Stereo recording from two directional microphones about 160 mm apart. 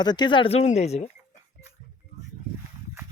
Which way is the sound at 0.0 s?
25° left (ahead or behind).